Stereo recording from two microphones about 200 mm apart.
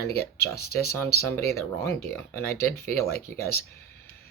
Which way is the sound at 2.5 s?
50° left (ahead or behind).